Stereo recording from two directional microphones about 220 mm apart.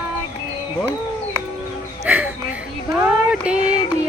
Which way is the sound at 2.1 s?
5° right (ahead or behind).